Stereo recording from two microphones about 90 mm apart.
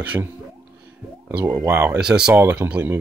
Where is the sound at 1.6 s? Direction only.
30° right (ahead or behind).